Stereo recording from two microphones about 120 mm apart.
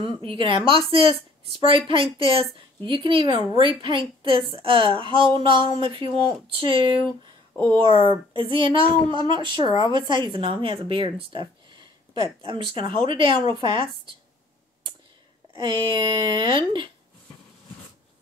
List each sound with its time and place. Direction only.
0.0 s speech: 45° right (ahead or behind)
7.5 s speech: 20° left (ahead or behind)
7.8 s speech: 45° right (ahead or behind)
15.5 s speech: 40° right (ahead or behind)